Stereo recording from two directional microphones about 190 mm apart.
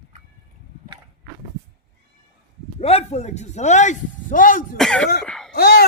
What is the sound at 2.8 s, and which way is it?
A man's voice, 35° left (ahead or behind).